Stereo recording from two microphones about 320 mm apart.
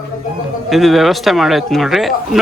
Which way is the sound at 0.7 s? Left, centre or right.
Centre.